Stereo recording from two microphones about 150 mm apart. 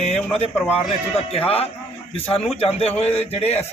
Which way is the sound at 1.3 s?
40° left (ahead or behind).